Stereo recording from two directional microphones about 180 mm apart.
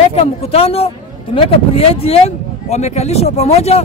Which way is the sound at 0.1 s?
35° left (ahead or behind).